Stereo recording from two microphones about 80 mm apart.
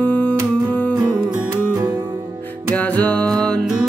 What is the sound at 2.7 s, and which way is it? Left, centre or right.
Music, centre.